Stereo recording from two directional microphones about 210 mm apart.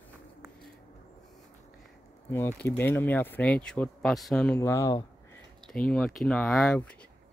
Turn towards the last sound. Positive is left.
turn(degrees=5)  # may be behind; listen again after turning